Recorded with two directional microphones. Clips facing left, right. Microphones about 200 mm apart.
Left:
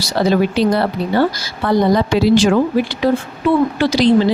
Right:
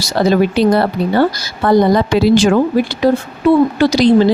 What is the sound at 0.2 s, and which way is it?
Speech, 45° right (ahead or behind).